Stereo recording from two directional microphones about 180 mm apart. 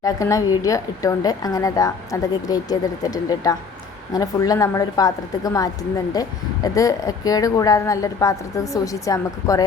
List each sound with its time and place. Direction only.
0.0 s a woman's voice: 20° left (ahead or behind)